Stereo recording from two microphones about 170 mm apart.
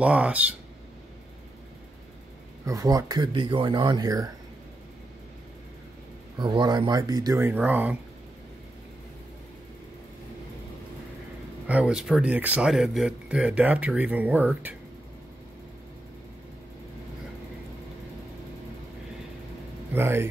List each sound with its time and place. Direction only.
0.0 s speech: 5° right (ahead or behind)
2.6 s speech: 20° right (ahead or behind)
6.3 s speech: 25° right (ahead or behind); by 8.0 s 10° right (ahead or behind)
11.6 s speech: 5° right (ahead or behind)
19.9 s speech: 15° right (ahead or behind)